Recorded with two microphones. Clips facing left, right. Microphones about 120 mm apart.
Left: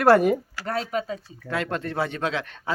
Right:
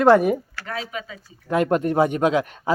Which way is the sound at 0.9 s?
40° left (ahead or behind).